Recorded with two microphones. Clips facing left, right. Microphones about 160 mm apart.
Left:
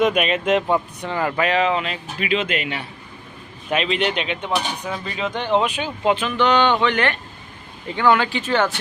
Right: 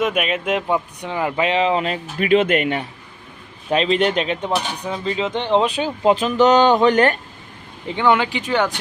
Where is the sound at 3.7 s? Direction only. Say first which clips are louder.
Right 4 dB; 35° right (ahead or behind).